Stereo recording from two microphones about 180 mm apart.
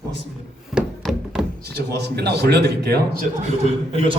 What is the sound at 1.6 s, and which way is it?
A man's voice, 65° right (ahead or behind).